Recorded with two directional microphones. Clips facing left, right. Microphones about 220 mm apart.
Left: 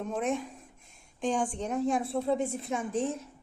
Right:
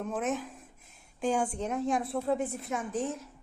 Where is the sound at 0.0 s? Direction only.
5° right (ahead or behind).